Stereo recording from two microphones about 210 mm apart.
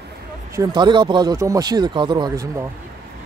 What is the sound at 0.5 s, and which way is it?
Speech, 20° right (ahead or behind).